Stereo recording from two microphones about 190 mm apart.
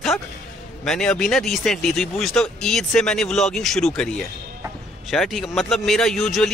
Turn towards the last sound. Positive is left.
turn(degrees=0)  # may be behind; listen again after turning